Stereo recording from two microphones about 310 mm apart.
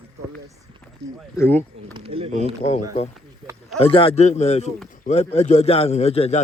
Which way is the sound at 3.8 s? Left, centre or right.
Centre.